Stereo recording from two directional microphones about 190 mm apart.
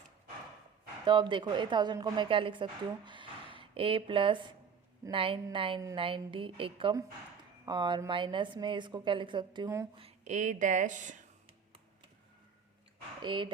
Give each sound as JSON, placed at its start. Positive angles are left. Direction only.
{"t": 1.0, "sound": "a woman's voice", "side_deg": -25}
{"t": 10.0, "sound": "speech", "side_deg": -35}
{"t": 13.2, "sound": "a woman's voice", "side_deg": -25}